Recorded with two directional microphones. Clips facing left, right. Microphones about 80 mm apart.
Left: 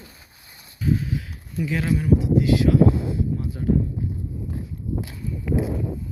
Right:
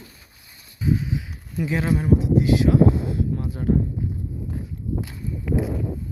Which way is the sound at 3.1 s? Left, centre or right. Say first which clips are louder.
Even; right.